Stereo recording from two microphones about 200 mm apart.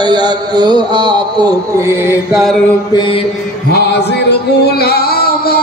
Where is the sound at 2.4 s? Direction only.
Centre (ahead or behind).